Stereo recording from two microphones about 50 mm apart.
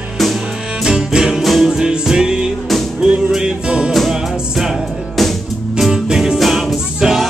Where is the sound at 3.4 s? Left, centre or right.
Centre.